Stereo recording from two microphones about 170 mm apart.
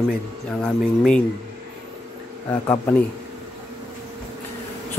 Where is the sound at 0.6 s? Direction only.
5° left (ahead or behind).